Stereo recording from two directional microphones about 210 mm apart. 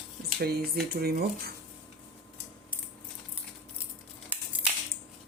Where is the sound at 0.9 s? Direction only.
45° right (ahead or behind).